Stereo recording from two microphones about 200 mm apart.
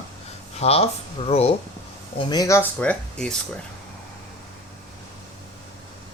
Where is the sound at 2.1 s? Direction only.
20° left (ahead or behind).